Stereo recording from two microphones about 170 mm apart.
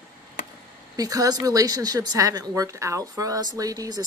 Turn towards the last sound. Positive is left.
turn(degrees=-20)  # may be behind; listen again after turning